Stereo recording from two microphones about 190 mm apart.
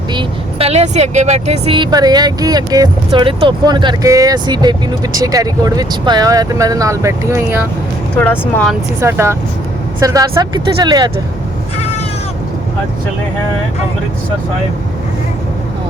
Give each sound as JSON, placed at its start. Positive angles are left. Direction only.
{"t": 0.1, "sound": "speech", "side_deg": -25}
{"t": 8.2, "sound": "speech", "side_deg": 10}
{"t": 9.0, "sound": "speech", "side_deg": -15}